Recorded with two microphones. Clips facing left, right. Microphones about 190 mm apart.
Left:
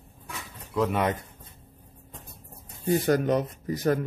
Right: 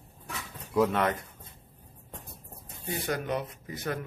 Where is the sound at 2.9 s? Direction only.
40° left (ahead or behind).